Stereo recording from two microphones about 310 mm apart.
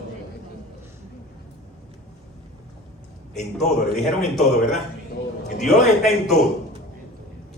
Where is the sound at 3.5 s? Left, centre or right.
Centre.